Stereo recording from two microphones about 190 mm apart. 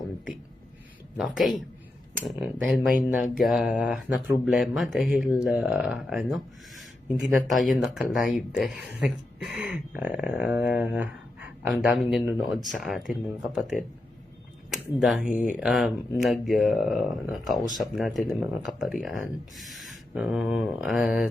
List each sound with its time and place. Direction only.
1.1 s speech: 5° right (ahead or behind)
15.3 s speech: 45° left (ahead or behind)
15.5 s speech: centre (ahead or behind)